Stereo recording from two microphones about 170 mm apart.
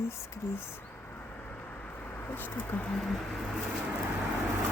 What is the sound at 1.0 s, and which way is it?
Vehicle, 10° left (ahead or behind).